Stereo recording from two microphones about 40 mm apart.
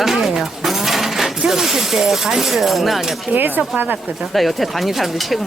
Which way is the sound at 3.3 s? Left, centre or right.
Right.